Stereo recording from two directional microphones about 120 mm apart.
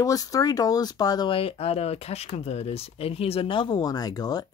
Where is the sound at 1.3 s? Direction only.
50° left (ahead or behind).